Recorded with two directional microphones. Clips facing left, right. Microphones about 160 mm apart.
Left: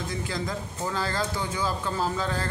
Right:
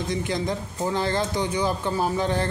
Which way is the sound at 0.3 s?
20° right (ahead or behind).